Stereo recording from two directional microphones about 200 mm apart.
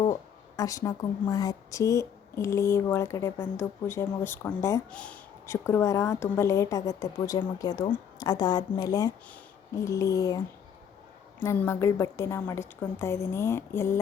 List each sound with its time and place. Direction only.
0.0 s a woman's voice: 20° left (ahead or behind)
11.4 s a woman's voice: 10° left (ahead or behind)